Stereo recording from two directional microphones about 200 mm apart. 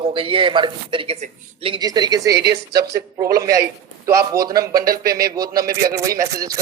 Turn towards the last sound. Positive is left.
turn(degrees=-15)  # may be behind; listen again after turning